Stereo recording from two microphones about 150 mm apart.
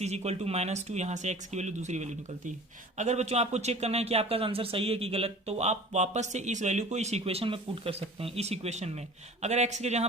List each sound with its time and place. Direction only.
0.0 s speech: 45° right (ahead or behind)